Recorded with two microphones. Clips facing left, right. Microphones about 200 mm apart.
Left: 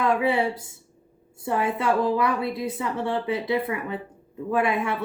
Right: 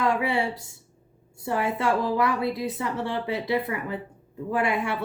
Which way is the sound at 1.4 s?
25° left (ahead or behind).